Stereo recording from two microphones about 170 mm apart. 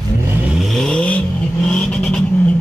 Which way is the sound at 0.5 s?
Centre (ahead or behind).